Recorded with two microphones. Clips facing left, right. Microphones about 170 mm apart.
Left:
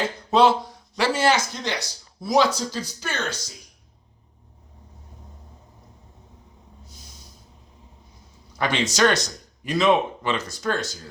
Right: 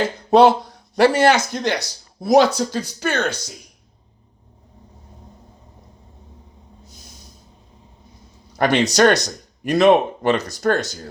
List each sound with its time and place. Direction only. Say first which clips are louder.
0.3 s speech: right 5 dB; 60° right (ahead or behind)
8.9 s speech: right 5 dB; 65° right (ahead or behind)